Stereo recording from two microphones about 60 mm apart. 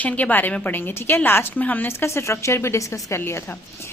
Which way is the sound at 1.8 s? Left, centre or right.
Left.